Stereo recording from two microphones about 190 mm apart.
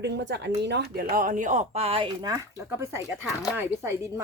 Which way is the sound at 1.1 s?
45° right (ahead or behind).